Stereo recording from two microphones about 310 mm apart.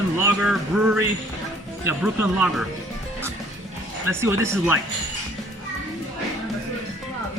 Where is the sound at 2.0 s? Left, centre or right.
Centre.